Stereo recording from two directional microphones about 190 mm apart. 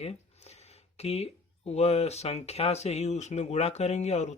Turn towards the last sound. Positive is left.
turn(degrees=35)  # may be behind; listen again after turning